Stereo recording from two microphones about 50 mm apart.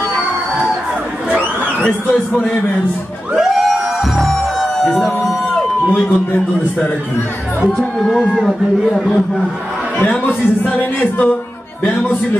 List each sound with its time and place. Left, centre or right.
1.9 s speech: left
3.3 s music: centre
7.7 s a man's voice: centre
10.0 s speech: left